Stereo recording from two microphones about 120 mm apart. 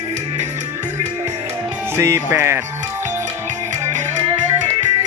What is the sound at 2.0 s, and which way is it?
Music, 20° right (ahead or behind).